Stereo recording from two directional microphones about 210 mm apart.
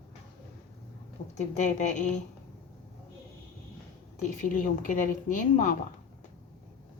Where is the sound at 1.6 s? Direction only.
35° left (ahead or behind).